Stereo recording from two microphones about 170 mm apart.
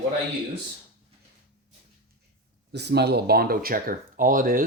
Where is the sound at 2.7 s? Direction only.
80° right; by 4.6 s 55° right (ahead or behind).